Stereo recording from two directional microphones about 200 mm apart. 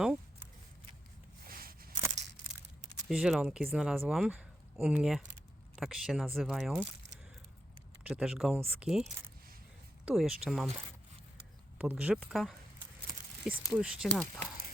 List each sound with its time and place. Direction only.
1.5 s a sound: 45° right (ahead or behind)
3.1 s speech: centre (ahead or behind)
8.0 s speech: 5° right (ahead or behind)
11.8 s speech: 5° right (ahead or behind)